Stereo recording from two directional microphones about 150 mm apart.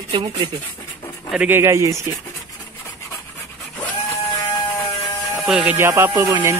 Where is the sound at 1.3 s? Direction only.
10° right (ahead or behind).